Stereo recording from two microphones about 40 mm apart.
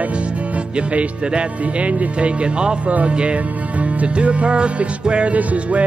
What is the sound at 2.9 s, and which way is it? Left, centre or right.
Music, right.